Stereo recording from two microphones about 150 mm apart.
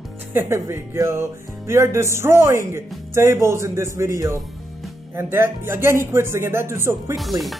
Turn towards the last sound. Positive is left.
turn(degrees=0)  # may be behind; listen again after turning